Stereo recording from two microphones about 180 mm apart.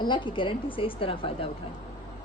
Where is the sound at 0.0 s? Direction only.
25° left (ahead or behind).